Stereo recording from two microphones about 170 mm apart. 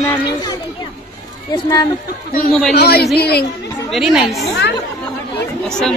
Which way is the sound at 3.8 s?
Centre (ahead or behind).